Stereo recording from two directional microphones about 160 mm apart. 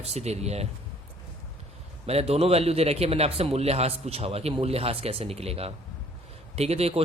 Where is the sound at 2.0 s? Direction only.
40° right (ahead or behind).